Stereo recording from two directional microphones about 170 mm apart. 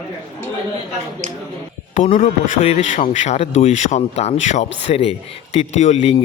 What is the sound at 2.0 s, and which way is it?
A man's voice, 45° left (ahead or behind).